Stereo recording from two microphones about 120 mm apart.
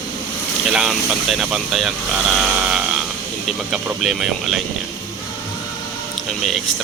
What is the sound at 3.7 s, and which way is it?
Speech, 5° right (ahead or behind).